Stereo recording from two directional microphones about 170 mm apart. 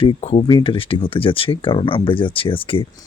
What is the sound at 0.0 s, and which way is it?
Speech, 35° left (ahead or behind).